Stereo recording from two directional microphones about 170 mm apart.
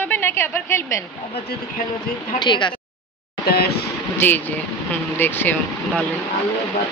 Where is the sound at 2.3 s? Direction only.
25° left (ahead or behind).